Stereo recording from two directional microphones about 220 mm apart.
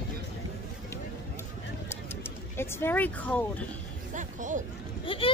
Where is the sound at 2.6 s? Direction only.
10° left (ahead or behind).